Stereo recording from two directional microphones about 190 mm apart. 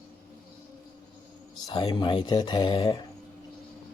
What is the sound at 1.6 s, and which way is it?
Speech, 20° left (ahead or behind).